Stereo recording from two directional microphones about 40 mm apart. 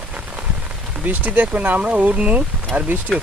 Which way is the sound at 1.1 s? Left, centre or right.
Right.